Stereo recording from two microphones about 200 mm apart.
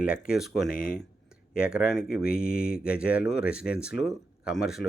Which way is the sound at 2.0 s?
50° left (ahead or behind).